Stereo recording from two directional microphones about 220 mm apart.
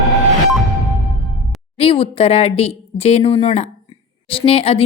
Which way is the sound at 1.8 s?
25° left (ahead or behind).